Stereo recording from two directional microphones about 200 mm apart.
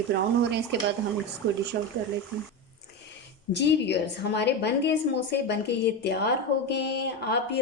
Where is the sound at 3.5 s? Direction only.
60° left (ahead or behind).